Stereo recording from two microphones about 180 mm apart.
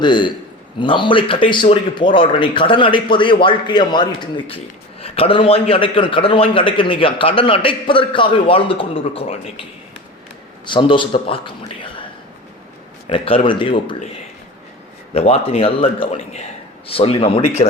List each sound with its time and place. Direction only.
0.0 s speech: 25° left (ahead or behind)
10.7 s speech: 25° left (ahead or behind)
13.1 s speech: 30° left (ahead or behind)
15.1 s speech: 35° left (ahead or behind)